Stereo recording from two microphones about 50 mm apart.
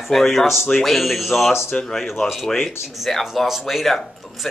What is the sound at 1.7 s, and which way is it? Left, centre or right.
Speech, centre.